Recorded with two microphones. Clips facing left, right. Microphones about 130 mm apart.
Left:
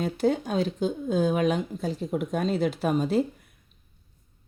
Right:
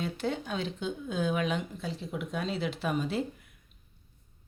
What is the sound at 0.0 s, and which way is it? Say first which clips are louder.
A woman's voice: left 8 dB; 40° left (ahead or behind).